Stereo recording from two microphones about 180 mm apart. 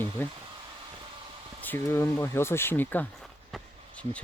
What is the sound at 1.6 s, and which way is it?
Speech, 10° left (ahead or behind).